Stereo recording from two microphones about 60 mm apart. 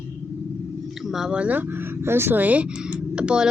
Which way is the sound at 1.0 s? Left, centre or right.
Centre.